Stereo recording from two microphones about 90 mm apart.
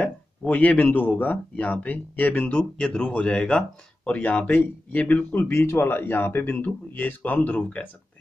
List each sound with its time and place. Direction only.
0.0 s speech: 15° left (ahead or behind)